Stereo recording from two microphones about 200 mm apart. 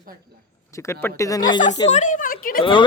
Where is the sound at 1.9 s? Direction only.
40° left (ahead or behind).